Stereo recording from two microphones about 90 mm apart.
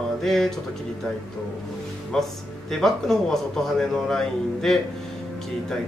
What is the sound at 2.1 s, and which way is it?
A man's voice, 5° left (ahead or behind).